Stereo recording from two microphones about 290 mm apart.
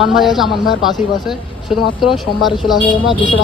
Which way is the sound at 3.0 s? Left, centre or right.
Centre.